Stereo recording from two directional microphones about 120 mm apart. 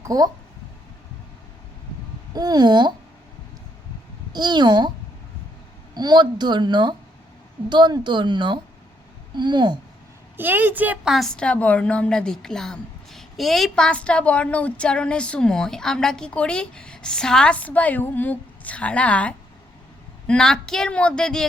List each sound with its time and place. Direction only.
0.0 s speech: 30° right (ahead or behind)
2.3 s a woman's voice: 35° right (ahead or behind)
4.3 s a woman's voice: 35° right (ahead or behind)
5.9 s a woman's voice: 35° right (ahead or behind)
10.3 s a woman's voice: 15° right (ahead or behind)
11.1 s a woman's voice: 5° left (ahead or behind)